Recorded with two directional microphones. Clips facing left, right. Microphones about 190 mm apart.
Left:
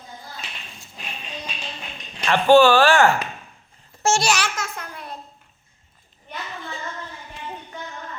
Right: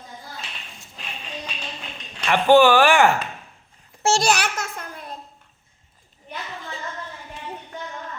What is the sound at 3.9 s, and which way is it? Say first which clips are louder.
Babbling: even; 15° right (ahead or behind).